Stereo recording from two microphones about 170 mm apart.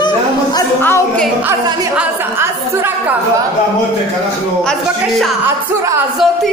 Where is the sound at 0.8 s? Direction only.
10° left (ahead or behind).